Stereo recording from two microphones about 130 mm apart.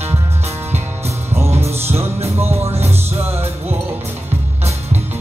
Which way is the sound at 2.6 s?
55° right (ahead or behind).